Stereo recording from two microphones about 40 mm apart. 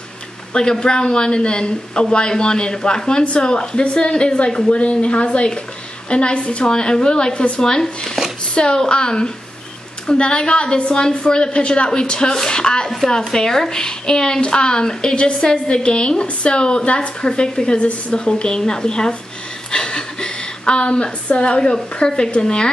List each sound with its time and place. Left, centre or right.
0.5 s a woman's voice: left